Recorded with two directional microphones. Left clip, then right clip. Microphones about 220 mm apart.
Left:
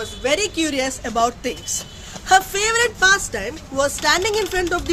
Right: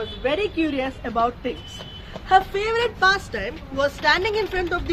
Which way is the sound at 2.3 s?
60° left (ahead or behind).